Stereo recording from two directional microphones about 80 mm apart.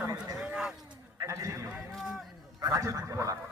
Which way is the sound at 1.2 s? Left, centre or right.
Right.